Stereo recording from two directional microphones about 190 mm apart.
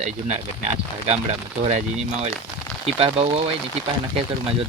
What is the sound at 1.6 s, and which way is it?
Speech, 35° right (ahead or behind).